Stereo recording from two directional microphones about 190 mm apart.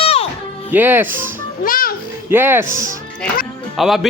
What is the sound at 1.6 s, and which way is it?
Speech, 45° left (ahead or behind).